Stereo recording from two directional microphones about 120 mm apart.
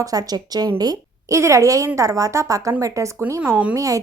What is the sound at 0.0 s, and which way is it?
A woman's voice, 30° right (ahead or behind).